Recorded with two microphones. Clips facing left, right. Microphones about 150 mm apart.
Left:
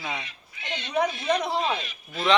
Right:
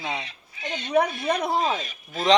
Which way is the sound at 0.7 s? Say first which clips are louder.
Right 3 dB; 50° right (ahead or behind).